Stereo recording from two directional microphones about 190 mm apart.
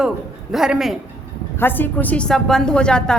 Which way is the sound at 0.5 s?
Centre (ahead or behind).